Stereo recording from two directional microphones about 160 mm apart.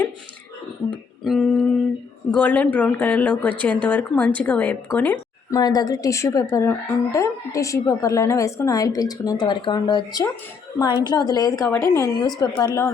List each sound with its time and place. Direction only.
1.2 s a sound: centre (ahead or behind)
2.3 s speech: 10° left (ahead or behind)
5.5 s a woman's voice: 25° left (ahead or behind)